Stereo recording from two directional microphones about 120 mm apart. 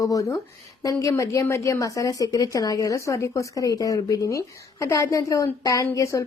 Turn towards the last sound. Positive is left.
turn(degrees=25)  # may be behind; listen again after turning